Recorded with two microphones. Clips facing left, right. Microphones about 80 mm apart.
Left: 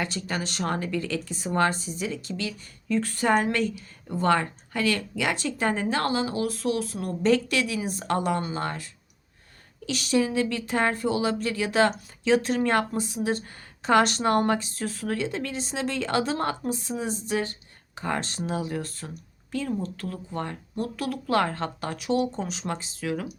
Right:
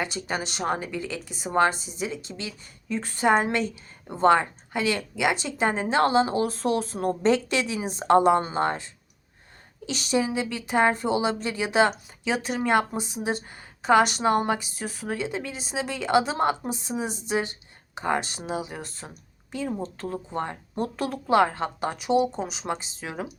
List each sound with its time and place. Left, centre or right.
0.0 s speech: centre
13.8 s speech: centre; by 21.3 s right
21.3 s speech: centre